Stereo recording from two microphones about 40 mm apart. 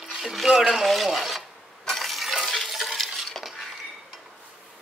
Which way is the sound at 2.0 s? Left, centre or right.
Centre.